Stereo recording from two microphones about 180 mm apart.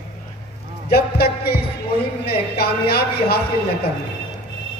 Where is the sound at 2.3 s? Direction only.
60° left (ahead or behind).